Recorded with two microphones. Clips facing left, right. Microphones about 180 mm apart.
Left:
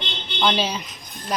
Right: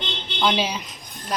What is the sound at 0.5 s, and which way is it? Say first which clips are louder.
Speech: even; 10° right (ahead or behind).